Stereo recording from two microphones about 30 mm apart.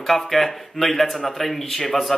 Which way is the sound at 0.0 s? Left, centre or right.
Centre.